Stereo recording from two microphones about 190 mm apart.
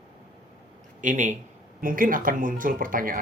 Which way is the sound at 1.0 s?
45° right (ahead or behind).